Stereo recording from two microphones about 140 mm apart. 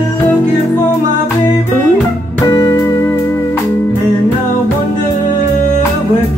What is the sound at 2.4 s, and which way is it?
Music, 25° left (ahead or behind).